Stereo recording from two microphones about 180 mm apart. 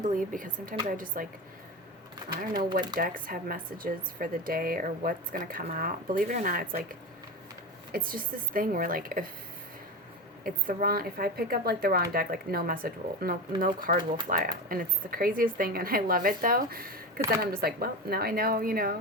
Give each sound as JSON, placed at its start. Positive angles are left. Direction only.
{"t": 0.0, "sound": "a woman's voice", "side_deg": -45}
{"t": 2.4, "sound": "a woman's voice", "side_deg": -50}
{"t": 7.9, "sound": "a woman's voice", "side_deg": -50}
{"t": 10.4, "sound": "a woman's voice", "side_deg": -50}